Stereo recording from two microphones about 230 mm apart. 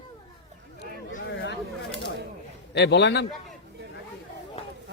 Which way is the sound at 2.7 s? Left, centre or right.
Left.